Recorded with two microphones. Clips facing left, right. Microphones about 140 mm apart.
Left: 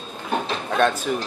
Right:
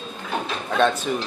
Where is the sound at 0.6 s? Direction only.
Centre (ahead or behind).